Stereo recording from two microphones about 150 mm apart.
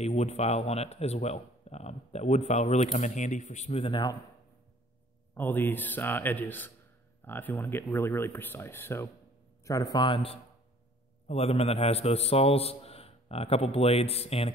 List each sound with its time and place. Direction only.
0.0 s a man's voice: 45° left (ahead or behind); by 4.2 s 30° left (ahead or behind)
5.3 s a man's voice: 15° left (ahead or behind); by 14.5 s 40° left (ahead or behind)